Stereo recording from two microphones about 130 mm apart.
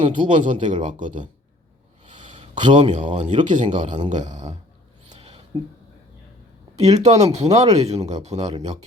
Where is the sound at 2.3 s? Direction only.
40° right (ahead or behind).